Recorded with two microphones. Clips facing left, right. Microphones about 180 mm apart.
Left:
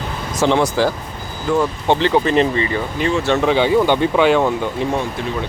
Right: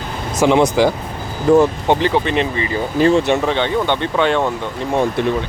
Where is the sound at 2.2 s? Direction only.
35° left (ahead or behind).